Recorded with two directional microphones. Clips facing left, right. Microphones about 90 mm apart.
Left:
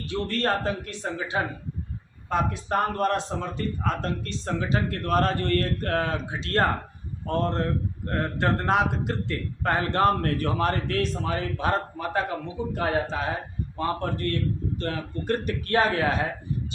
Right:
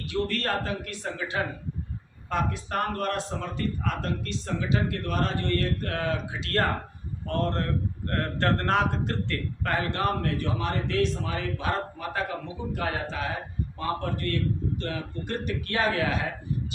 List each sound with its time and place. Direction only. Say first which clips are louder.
0.1 s a man's voice: left 2 dB; 30° left (ahead or behind)
8.0 s a man's voice: left 1 dB; 15° left (ahead or behind)
9.6 s a man's voice: left 5 dB; 35° left (ahead or behind)